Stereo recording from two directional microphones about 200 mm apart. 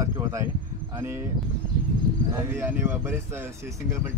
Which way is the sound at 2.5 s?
15° right (ahead or behind).